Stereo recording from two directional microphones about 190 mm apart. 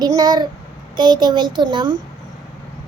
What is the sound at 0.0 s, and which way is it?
Child singing, 20° right (ahead or behind).